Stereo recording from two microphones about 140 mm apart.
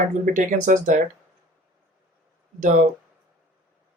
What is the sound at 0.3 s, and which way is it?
Speech, 65° right (ahead or behind).